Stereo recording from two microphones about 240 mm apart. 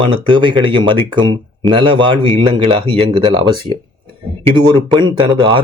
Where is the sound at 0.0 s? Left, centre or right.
Centre.